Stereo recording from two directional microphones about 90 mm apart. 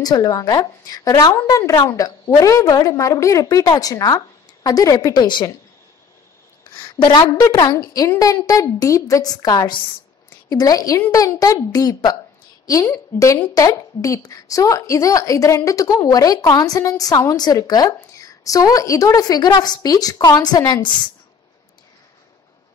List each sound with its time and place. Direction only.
0.0 s a woman's voice: 45° left (ahead or behind)
5.1 s a woman's voice: 60° left (ahead or behind)
6.6 s a sound: 55° left (ahead or behind)
7.5 s a woman's voice: 40° left (ahead or behind); by 9.8 s 55° left (ahead or behind)
10.5 s a woman's voice: 45° left (ahead or behind)
12.8 s a woman's voice: 30° left (ahead or behind); by 20.9 s 50° left (ahead or behind)